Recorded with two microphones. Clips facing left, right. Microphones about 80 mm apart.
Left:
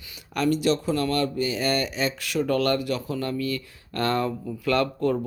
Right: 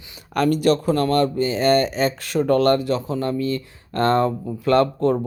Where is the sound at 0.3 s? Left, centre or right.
Right.